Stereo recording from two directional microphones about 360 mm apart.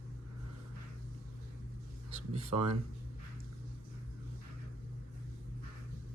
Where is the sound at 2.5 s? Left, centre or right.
Right.